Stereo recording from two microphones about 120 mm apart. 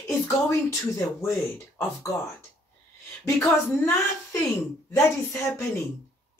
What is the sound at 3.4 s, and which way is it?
A woman's voice, 20° left (ahead or behind).